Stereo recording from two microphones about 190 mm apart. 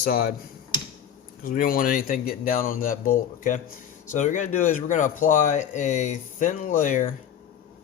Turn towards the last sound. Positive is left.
turn(degrees=45)  # may be behind; listen again after turning